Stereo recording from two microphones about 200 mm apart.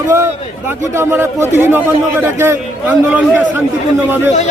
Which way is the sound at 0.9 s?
10° right (ahead or behind).